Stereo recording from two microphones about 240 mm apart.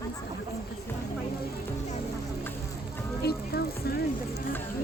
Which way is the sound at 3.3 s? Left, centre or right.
Left.